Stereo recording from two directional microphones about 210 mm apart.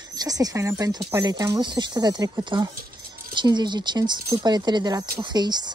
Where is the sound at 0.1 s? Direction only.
20° right (ahead or behind).